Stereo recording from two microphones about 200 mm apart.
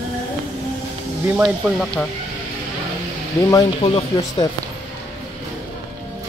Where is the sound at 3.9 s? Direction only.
30° left (ahead or behind).